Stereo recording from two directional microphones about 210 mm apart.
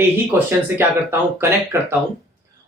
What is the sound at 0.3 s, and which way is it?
Speech, 10° right (ahead or behind).